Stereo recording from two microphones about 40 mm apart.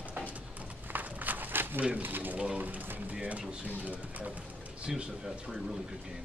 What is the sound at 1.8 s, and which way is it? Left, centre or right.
Speech, right.